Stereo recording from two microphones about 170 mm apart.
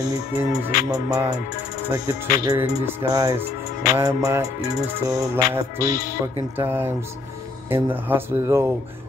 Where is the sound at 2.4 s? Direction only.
15° right (ahead or behind).